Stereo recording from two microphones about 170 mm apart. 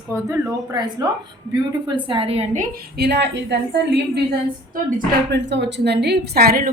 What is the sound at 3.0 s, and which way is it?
A woman's voice, 85° right.